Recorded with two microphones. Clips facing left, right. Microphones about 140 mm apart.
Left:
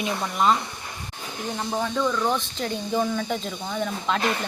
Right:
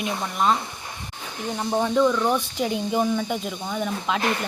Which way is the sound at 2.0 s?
5° right (ahead or behind).